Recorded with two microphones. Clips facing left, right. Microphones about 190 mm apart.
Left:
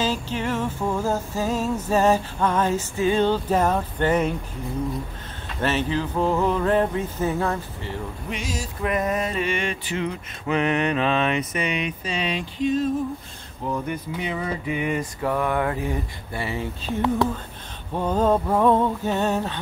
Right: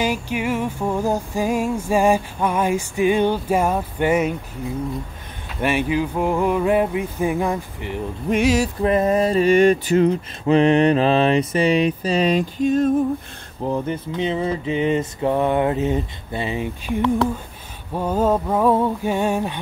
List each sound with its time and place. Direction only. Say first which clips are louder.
0.0 s music: right 3 dB; 15° right (ahead or behind)
5.6 s music: right 3 dB; 10° right (ahead or behind)
8.4 s a sound: right 15 dB; 70° right (ahead or behind)
8.8 s mantra: right 5 dB; 30° right (ahead or behind); by 12.9 s 50° right (ahead or behind)
13.7 s mantra: right 4 dB; 30° right (ahead or behind)
17.9 s music: right 1 dB; 10° right (ahead or behind)